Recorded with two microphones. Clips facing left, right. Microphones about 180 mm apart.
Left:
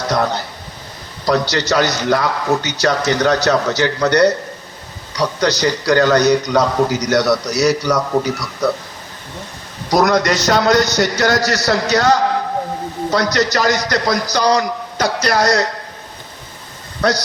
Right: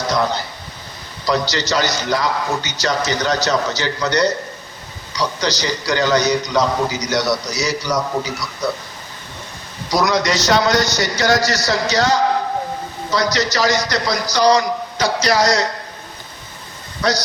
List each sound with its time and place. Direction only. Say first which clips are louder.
1.2 s a man's voice: left 3 dB; 60° left (ahead or behind)
9.9 s a man's voice: left 3 dB; 55° left (ahead or behind)
17.0 s a man's voice: left 3 dB; 55° left (ahead or behind)